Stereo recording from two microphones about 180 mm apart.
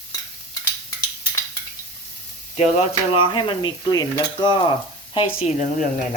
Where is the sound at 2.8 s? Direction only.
30° left (ahead or behind).